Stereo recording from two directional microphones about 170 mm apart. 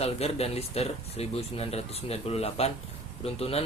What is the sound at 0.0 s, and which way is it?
Speech, 35° left (ahead or behind).